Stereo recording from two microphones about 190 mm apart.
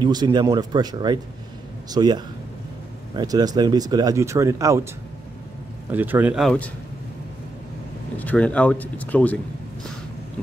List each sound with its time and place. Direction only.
0.0 s speech: 20° right (ahead or behind)
5.9 s speech: 10° right (ahead or behind)
8.2 s speech: 10° left (ahead or behind)